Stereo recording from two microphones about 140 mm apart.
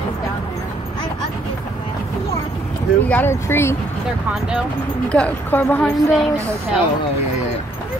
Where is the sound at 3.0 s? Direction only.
15° left (ahead or behind).